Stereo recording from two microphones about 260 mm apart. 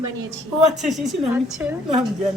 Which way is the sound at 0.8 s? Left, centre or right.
Centre.